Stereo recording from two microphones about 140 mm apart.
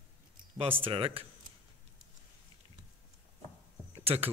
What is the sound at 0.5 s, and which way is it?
Speech, 40° right (ahead or behind).